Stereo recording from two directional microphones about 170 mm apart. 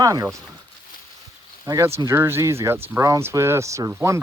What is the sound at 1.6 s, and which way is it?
Speech, 15° right (ahead or behind).